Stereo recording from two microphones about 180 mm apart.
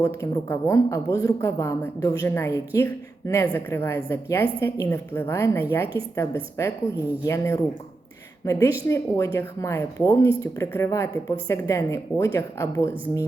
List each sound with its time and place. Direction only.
0.0 s speech: 15° left (ahead or behind)